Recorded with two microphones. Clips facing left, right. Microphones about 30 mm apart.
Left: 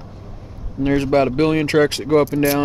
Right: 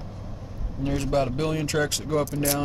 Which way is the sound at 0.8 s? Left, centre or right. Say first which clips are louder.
Left 9 dB; left.